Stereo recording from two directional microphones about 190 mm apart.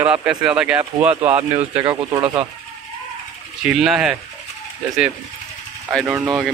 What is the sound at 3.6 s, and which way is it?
Speech, 5° right (ahead or behind).